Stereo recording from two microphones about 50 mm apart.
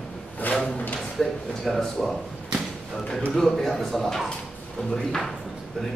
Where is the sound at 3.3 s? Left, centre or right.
Centre.